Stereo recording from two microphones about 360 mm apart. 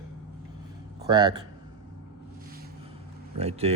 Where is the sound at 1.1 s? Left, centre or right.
Centre.